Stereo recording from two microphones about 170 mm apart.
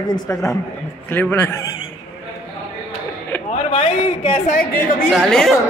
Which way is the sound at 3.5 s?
35° left (ahead or behind).